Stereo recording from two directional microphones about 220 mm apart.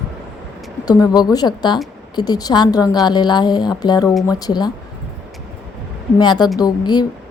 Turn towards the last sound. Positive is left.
turn(degrees=20)  # may be behind; listen again after turning